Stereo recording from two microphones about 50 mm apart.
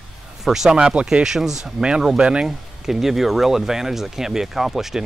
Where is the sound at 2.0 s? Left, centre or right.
Centre.